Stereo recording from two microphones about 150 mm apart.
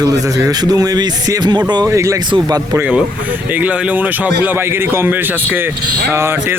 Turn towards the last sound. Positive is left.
turn(degrees=-15)  # may be behind; listen again after turning